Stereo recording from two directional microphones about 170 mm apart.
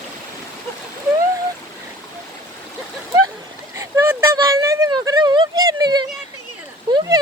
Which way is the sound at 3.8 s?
15° right (ahead or behind).